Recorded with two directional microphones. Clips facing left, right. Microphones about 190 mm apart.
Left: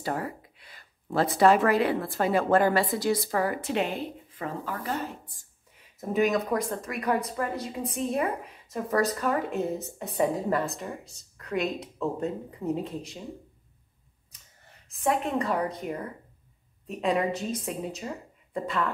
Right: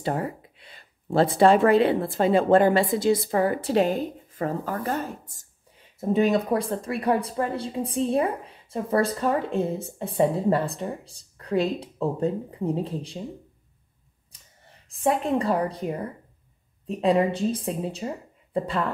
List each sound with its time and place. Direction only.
0.0 s a sound: 25° right (ahead or behind)
1.4 s a woman's voice: 30° right (ahead or behind); by 5.5 s 45° right (ahead or behind)
5.9 s speech: 30° right (ahead or behind)
14.9 s speech: 30° right (ahead or behind)